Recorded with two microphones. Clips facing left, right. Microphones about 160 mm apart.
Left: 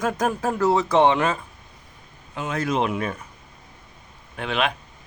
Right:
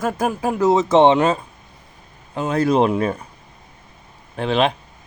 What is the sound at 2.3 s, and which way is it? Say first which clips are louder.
Speech: right 7 dB; 35° right (ahead or behind).